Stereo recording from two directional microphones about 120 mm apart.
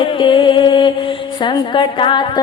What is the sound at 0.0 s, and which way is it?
Music, 45° left (ahead or behind).